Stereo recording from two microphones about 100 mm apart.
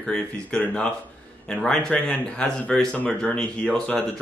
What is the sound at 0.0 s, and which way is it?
Speech, 10° left (ahead or behind).